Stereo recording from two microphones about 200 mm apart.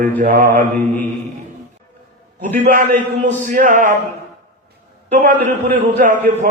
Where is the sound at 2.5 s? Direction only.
40° right (ahead or behind).